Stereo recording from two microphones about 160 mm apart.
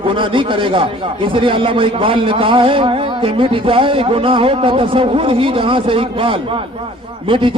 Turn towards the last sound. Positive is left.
turn(degrees=-30)  # may be behind; listen again after turning